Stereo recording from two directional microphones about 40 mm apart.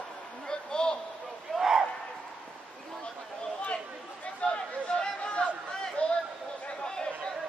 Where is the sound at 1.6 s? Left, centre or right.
Centre.